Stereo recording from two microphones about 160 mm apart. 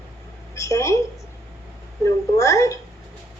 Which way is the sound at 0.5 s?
20° left (ahead or behind).